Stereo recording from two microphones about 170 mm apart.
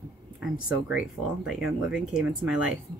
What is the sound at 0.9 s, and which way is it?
Speech, 5° right (ahead or behind).